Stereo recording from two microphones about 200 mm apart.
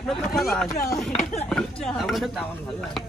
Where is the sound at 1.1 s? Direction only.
30° left (ahead or behind).